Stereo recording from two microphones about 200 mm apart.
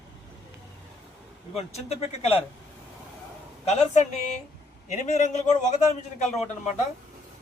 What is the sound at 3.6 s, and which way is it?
Speech, 30° left (ahead or behind).